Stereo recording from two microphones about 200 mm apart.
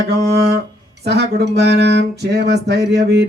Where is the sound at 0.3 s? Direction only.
55° right (ahead or behind).